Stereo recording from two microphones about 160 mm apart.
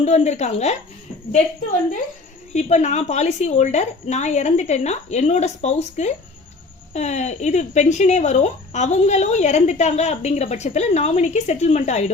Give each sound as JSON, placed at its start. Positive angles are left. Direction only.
{"t": 0.0, "sound": "speech", "side_deg": 45}
{"t": 2.5, "sound": "speech", "side_deg": 45}